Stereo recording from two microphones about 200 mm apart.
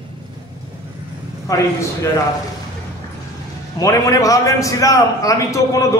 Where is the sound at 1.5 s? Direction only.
15° left (ahead or behind).